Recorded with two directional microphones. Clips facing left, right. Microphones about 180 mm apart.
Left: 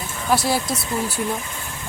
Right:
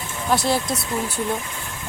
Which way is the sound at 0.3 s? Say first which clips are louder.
Even; 5° left (ahead or behind).